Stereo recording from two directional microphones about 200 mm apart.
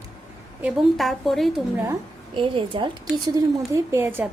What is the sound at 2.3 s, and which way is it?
Speech, 25° right (ahead or behind).